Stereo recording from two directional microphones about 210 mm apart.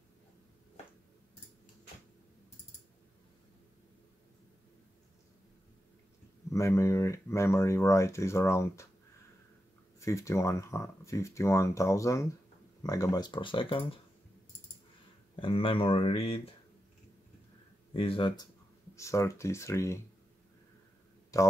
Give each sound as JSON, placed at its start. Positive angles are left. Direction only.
{"t": 6.5, "sound": "speech", "side_deg": 15}
{"t": 9.9, "sound": "speech", "side_deg": 15}
{"t": 15.3, "sound": "speech", "side_deg": 25}
{"t": 17.9, "sound": "speech", "side_deg": 25}
{"t": 21.3, "sound": "speech", "side_deg": 15}